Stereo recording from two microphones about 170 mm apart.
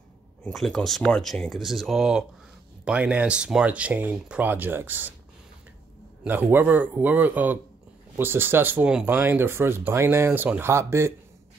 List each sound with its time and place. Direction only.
0.4 s speech: centre (ahead or behind)
6.2 s speech: 10° right (ahead or behind)